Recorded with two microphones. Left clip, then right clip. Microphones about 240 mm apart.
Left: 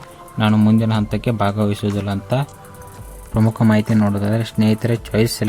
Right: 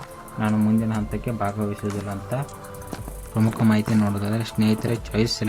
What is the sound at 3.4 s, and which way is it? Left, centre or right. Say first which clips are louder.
Speech: left 5 dB; left.